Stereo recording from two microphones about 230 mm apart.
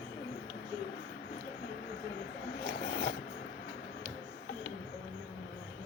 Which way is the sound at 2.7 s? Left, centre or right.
Left.